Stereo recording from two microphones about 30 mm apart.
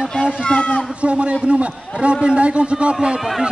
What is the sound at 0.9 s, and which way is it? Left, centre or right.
A man's voice, right.